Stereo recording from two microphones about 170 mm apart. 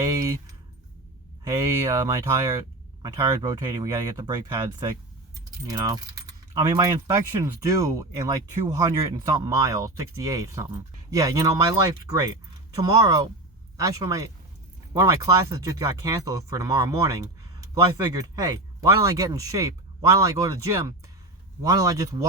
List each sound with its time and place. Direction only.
0.0 s keys jangling: 20° right (ahead or behind)
1.5 s speech: 20° right (ahead or behind)
12.8 s speech: 20° right (ahead or behind)